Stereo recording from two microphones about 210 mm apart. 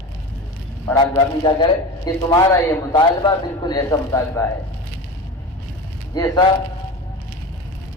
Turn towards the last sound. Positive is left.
turn(degrees=15)  # may be behind; listen again after turning